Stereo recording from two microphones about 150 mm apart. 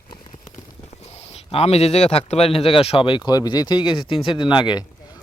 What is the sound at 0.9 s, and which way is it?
Speech, 45° left (ahead or behind).